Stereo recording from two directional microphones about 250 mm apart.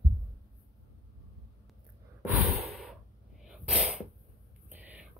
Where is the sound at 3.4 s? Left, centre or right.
Centre.